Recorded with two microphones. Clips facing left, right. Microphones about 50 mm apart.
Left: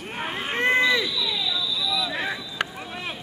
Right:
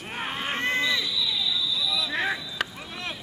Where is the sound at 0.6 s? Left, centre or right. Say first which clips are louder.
Left 7 dB; centre.